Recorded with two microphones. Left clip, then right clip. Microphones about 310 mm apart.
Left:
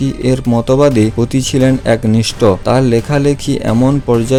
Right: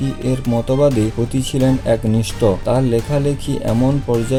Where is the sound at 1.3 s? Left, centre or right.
Left.